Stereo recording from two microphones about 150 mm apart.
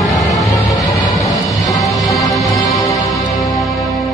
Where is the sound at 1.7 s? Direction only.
25° left (ahead or behind).